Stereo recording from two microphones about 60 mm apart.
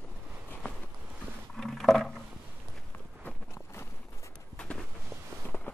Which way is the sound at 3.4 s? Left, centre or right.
Left.